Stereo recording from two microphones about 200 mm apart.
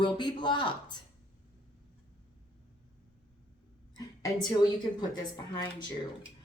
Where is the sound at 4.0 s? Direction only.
20° left (ahead or behind).